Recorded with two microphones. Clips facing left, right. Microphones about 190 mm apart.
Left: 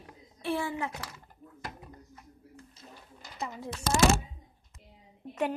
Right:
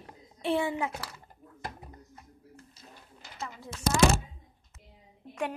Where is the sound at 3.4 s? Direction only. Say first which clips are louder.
Left 3 dB; 15° left (ahead or behind).